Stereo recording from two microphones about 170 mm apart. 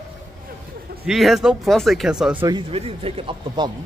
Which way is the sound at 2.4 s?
30° right (ahead or behind).